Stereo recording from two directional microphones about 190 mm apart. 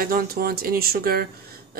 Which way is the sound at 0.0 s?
50° right (ahead or behind).